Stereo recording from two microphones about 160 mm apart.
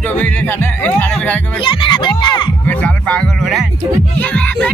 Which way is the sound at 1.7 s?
30° left (ahead or behind).